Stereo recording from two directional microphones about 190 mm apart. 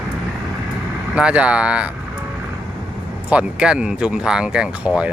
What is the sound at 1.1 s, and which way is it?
Speech, 5° right (ahead or behind).